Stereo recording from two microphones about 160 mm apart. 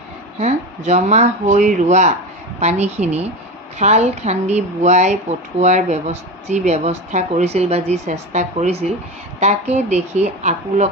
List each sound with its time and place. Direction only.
0.3 s speech: 45° right (ahead or behind)